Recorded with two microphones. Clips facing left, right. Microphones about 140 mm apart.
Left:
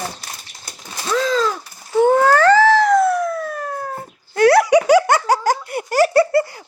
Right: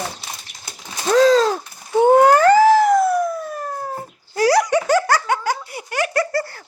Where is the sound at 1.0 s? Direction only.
40° right (ahead or behind).